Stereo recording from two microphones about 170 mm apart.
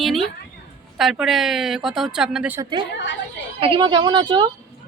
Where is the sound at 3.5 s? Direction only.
30° right (ahead or behind).